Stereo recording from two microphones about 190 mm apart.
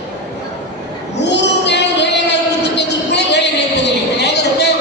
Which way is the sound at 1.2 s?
65° left (ahead or behind).